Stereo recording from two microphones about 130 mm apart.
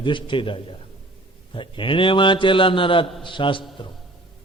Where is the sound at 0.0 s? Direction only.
40° left (ahead or behind).